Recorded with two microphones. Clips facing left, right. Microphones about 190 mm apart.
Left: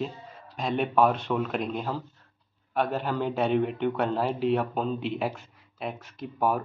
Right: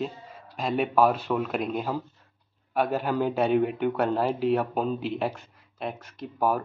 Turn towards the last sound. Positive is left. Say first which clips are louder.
# right 1 dB
turn(degrees=0)  # may be behind; listen again after turning